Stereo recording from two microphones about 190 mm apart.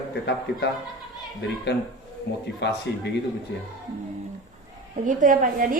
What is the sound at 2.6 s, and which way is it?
Speech, 65° left (ahead or behind).